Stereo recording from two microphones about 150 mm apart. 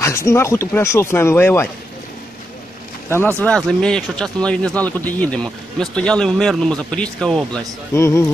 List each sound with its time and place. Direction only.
0.0 s speech: 20° left (ahead or behind)
3.1 s speech: 15° left (ahead or behind)
7.9 s speech: 15° left (ahead or behind)